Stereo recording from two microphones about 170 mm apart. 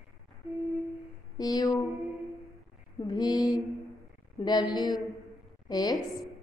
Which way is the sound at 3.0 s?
25° left (ahead or behind).